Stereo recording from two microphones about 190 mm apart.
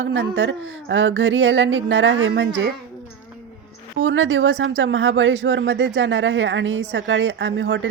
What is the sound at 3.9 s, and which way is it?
Speech, 90° right.